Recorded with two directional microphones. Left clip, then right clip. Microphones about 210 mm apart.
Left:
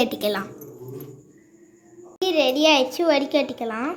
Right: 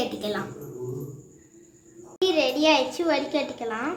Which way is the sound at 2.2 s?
25° left (ahead or behind).